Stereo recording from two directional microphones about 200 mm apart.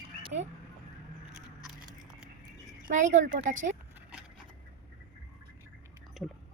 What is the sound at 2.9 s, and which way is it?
Speech, 40° right (ahead or behind).